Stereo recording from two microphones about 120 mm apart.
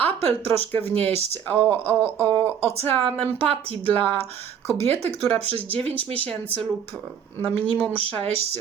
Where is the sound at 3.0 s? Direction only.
55° right (ahead or behind).